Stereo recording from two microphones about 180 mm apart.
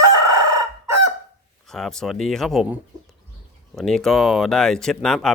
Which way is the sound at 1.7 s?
Centre (ahead or behind).